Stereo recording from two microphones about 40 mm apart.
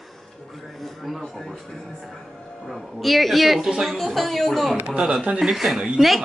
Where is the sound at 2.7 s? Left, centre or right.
Centre.